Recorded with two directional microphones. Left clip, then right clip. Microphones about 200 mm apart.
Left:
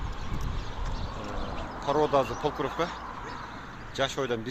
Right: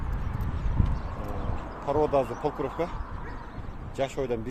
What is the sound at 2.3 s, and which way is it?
Speech, 30° left (ahead or behind).